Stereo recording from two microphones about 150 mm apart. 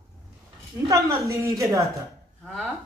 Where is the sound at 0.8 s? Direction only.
20° right (ahead or behind).